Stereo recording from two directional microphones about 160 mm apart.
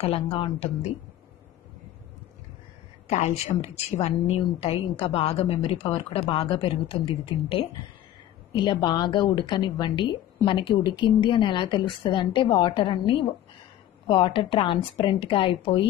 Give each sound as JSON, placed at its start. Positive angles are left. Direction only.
{"t": 0.0, "sound": "a woman's voice", "side_deg": 35}
{"t": 3.1, "sound": "a woman's voice", "side_deg": 45}